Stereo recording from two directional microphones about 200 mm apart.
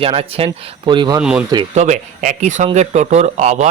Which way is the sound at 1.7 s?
35° right (ahead or behind).